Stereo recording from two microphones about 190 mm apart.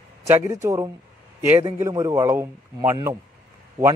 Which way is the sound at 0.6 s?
20° right (ahead or behind).